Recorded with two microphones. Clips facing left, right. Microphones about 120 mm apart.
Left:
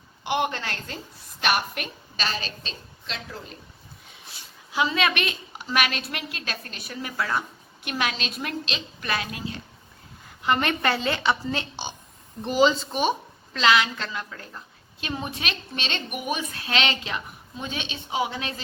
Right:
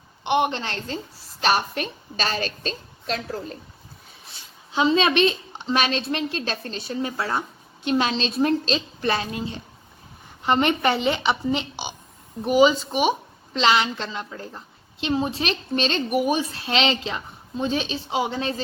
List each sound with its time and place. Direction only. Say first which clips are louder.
0.3 s a woman's voice: right 4 dB; 20° right (ahead or behind); by 3.6 s 40° right (ahead or behind)
4.7 s a woman's voice: right 5 dB; 25° right (ahead or behind); by 13.1 s 10° right (ahead or behind)
13.5 s a woman's voice: right 1 dB; 25° right (ahead or behind)